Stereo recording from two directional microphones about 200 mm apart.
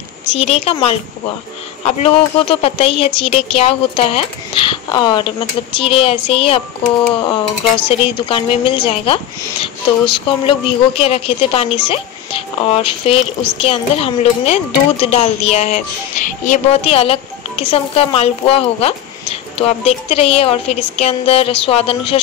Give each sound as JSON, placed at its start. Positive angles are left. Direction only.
{"t": 0.4, "sound": "a woman's voice", "side_deg": 30}
{"t": 7.8, "sound": "a woman's voice", "side_deg": 25}